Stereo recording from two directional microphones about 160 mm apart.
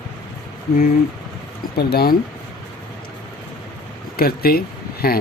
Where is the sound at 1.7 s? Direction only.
80° left.